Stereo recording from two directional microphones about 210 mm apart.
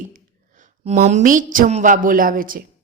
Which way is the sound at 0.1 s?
35° right (ahead or behind).